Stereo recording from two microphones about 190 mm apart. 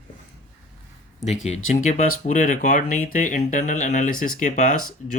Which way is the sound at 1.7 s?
40° left (ahead or behind).